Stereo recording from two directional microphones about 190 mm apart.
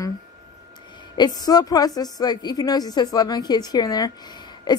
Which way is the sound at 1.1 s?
20° left (ahead or behind).